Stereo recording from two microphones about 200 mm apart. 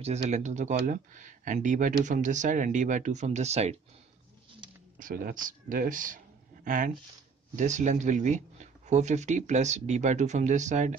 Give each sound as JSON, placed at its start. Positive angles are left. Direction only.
{"t": 0.0, "sound": "speech", "side_deg": -35}
{"t": 4.6, "sound": "a sound", "side_deg": -20}
{"t": 4.9, "sound": "speech", "side_deg": -45}